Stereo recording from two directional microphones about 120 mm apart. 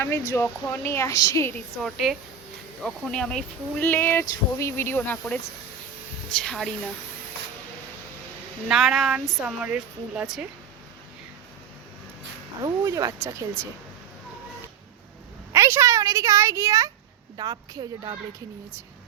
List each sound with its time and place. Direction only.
0.4 s a woman's voice: 15° left (ahead or behind)
1.8 s speech: centre (ahead or behind)
3.8 s speech: 20° left (ahead or behind)
6.4 s speech: 5° left (ahead or behind)
8.6 s speech: 5° right (ahead or behind)
12.6 s speech: 30° right (ahead or behind)
15.5 s a woman's voice: 20° right (ahead or behind)